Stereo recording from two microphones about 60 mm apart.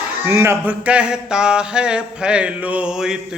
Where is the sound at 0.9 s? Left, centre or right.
Centre.